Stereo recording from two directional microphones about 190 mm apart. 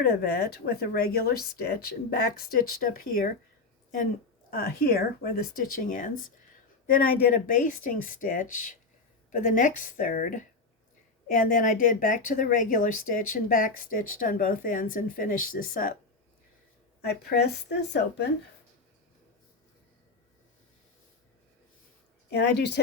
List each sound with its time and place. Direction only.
0.0 s a woman's voice: 60° left (ahead or behind)
4.5 s a woman's voice: 50° left (ahead or behind)
17.0 s speech: 60° left (ahead or behind)
22.3 s speech: 60° left (ahead or behind)